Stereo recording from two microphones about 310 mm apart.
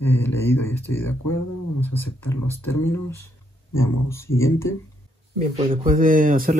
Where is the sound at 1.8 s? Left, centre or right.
Centre.